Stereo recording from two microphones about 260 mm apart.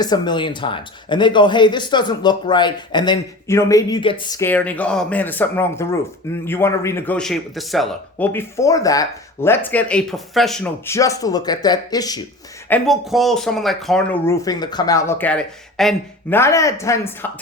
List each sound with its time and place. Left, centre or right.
0.0 s speech: centre
12.6 s speech: centre